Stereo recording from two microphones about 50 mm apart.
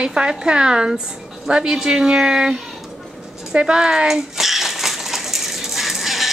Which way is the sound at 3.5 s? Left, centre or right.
Right.